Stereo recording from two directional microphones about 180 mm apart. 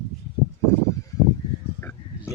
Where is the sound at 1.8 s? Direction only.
10° left (ahead or behind).